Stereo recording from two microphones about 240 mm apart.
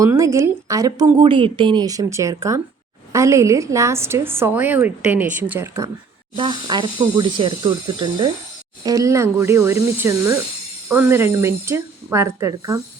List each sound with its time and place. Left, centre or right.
0.0 s a woman's voice: centre